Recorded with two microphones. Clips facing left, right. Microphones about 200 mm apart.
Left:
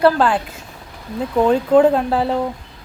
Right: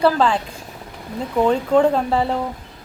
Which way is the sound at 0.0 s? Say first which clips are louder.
Left 2 dB; 5° left (ahead or behind).